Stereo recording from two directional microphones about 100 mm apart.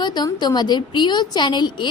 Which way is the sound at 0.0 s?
50° left (ahead or behind).